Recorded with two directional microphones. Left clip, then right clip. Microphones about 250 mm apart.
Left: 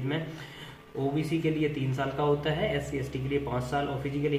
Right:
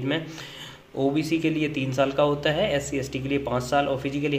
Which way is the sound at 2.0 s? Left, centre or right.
Right.